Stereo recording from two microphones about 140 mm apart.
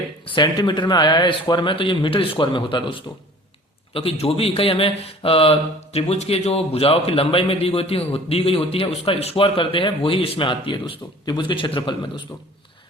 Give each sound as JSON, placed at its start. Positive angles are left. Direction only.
{"t": 0.3, "sound": "a man's voice", "side_deg": 35}